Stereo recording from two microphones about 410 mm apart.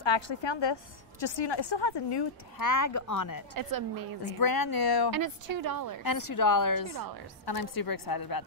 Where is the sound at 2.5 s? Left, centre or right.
Left.